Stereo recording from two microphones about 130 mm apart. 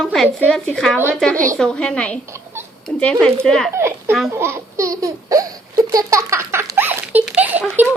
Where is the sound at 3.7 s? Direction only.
20° right (ahead or behind).